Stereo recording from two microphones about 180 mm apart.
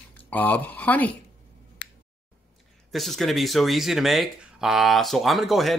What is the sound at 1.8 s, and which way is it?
Finger snapping, 75° left (ahead or behind).